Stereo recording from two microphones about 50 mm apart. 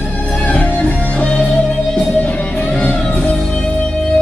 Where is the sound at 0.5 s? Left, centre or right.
Left.